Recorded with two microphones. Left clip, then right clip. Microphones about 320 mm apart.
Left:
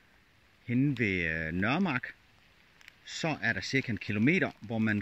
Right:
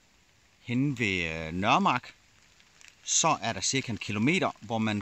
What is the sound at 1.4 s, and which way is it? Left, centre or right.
Speech, right.